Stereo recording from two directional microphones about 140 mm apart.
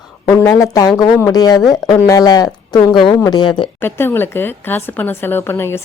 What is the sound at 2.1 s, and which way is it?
Speech, 25° left (ahead or behind).